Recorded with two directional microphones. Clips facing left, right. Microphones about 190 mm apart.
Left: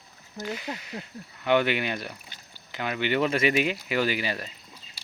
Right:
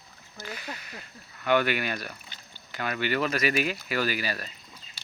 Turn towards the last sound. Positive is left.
turn(degrees=20)  # may be behind; listen again after turning